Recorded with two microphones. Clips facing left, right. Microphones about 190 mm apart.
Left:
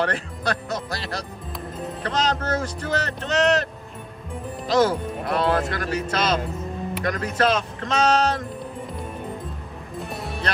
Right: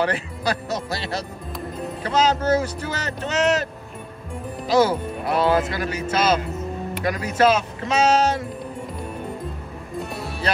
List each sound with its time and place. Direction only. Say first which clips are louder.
0.0 s speech: right 2 dB; 5° right (ahead or behind)
4.6 s speech: right 1 dB; 5° right (ahead or behind)
9.9 s music: right 1 dB; centre (ahead or behind)